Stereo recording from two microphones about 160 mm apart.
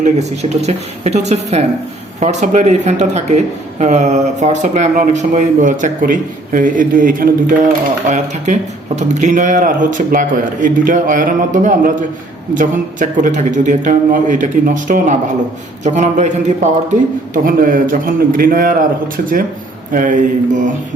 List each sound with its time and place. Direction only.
0.0 s speech: 45° right (ahead or behind); by 7.3 s 60° right (ahead or behind)
8.0 s speech: 50° right (ahead or behind)
17.3 s a man's voice: 60° right (ahead or behind)